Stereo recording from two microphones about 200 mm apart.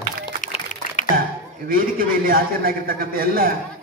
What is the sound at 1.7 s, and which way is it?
A man's voice, 45° right (ahead or behind).